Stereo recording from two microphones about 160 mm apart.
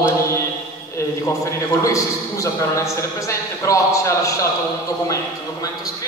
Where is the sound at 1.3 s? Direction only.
20° left (ahead or behind).